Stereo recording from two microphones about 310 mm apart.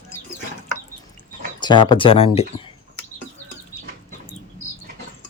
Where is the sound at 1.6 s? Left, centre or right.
Centre.